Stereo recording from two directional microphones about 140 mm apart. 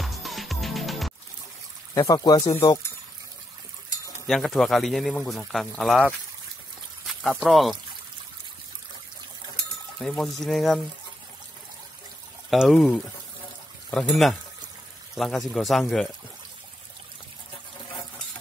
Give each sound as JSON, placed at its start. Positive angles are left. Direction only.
{"t": 0.0, "sound": "music", "side_deg": 0}
{"t": 2.0, "sound": "speech", "side_deg": 25}
{"t": 4.3, "sound": "speech", "side_deg": 0}
{"t": 7.1, "sound": "speech", "side_deg": 0}
{"t": 10.0, "sound": "speech", "side_deg": 5}
{"t": 12.4, "sound": "speech", "side_deg": 0}